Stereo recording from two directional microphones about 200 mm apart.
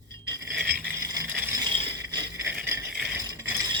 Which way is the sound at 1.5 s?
20° right (ahead or behind).